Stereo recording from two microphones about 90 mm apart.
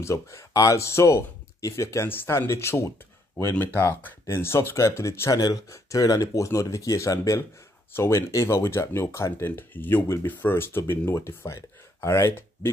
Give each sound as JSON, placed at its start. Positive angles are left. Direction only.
{"t": 0.0, "sound": "speech", "side_deg": 35}
{"t": 5.3, "sound": "speech", "side_deg": 45}